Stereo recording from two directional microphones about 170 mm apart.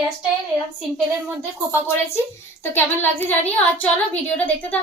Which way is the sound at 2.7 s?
10° left (ahead or behind).